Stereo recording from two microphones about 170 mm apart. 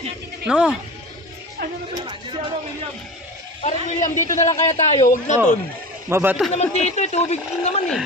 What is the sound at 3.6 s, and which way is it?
A man's voice, 45° left (ahead or behind).